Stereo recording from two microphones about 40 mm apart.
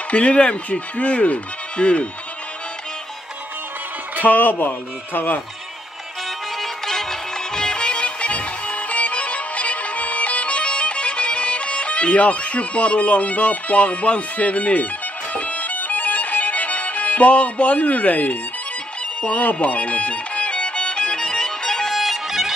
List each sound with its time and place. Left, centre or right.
0.1 s speech: left
4.2 s speech: left
6.6 s music: centre
21.9 s music: centre